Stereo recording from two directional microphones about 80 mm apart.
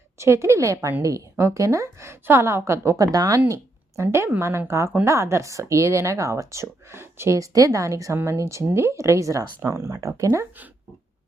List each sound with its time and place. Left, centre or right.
0.2 s speech: right
3.5 s speech: right